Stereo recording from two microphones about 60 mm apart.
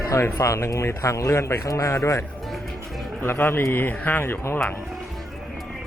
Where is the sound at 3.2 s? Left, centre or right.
Left.